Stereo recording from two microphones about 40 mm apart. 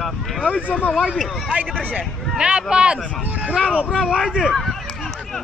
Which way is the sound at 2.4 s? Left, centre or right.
Right.